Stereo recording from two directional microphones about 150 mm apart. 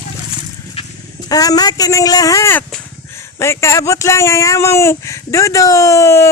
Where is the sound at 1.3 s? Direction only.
25° left (ahead or behind).